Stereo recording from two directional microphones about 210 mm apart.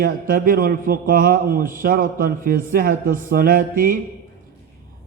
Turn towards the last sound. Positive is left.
turn(degrees=-40)  # may be behind; listen again after turning